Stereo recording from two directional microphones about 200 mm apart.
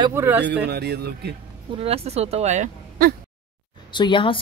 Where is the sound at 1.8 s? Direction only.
30° right (ahead or behind).